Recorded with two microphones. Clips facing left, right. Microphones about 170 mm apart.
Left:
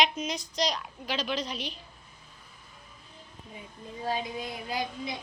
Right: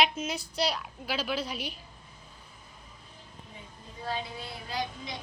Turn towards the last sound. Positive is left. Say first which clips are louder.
# left 2 dB
turn(degrees=10)  # may be behind; listen again after turning